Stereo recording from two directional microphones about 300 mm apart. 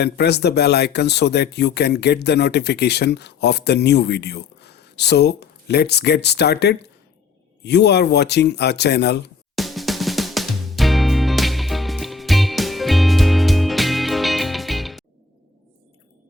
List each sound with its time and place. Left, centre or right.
0.0 s speech: left
9.6 s drum: centre